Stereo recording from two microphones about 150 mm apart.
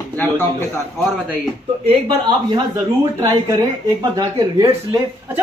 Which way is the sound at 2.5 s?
25° right (ahead or behind).